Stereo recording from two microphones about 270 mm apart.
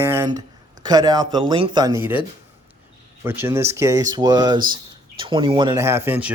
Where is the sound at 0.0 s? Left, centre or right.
Centre.